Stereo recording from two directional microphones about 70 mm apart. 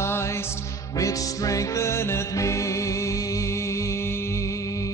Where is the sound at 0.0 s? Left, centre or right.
Left.